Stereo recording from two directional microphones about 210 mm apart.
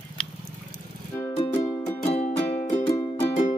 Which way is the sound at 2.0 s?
30° left (ahead or behind).